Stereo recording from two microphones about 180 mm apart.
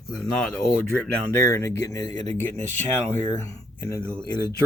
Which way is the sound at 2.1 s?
35° right (ahead or behind).